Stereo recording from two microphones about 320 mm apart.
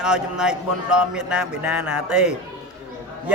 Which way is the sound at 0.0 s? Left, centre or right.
Centre.